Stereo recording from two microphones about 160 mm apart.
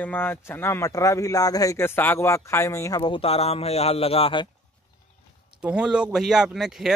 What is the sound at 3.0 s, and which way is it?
A man's voice, 35° left (ahead or behind).